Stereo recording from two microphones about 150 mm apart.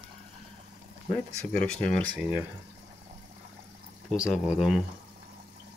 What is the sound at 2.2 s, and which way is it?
Speech, 10° right (ahead or behind).